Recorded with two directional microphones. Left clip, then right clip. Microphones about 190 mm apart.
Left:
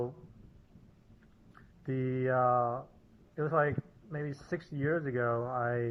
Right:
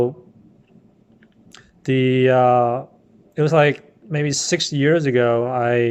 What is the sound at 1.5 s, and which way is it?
Speech, 30° right (ahead or behind).